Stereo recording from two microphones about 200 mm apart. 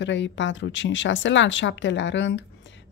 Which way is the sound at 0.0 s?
65° left (ahead or behind).